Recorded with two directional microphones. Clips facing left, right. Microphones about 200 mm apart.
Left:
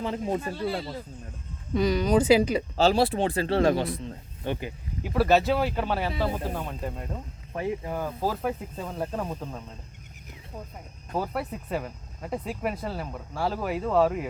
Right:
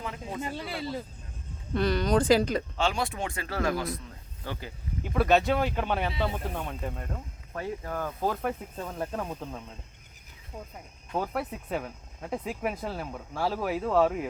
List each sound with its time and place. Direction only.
0.0 s speech: 35° left (ahead or behind)
1.7 s speech: 10° left (ahead or behind)
2.7 s speech: 35° left (ahead or behind)
5.0 s speech: 5° left (ahead or behind)
7.5 s speech: 15° left (ahead or behind)
11.1 s speech: centre (ahead or behind)